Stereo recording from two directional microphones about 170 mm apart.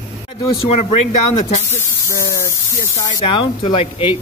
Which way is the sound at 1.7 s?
15° left (ahead or behind).